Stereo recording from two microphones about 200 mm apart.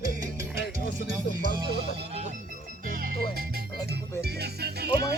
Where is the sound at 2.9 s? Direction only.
45° right (ahead or behind).